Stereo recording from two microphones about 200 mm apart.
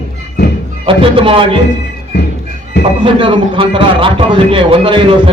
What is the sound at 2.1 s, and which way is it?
Music, 60° left (ahead or behind).